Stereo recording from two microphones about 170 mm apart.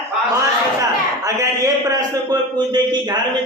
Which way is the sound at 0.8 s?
20° right (ahead or behind).